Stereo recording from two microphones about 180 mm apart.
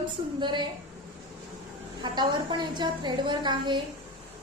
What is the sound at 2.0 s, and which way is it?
A woman's voice, 25° right (ahead or behind).